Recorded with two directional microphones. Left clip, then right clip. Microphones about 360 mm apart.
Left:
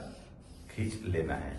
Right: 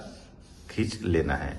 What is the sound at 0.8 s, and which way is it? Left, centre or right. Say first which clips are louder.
Speech: right 9 dB; right.